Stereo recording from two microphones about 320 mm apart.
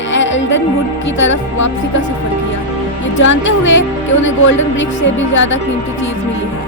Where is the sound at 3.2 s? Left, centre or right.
Left.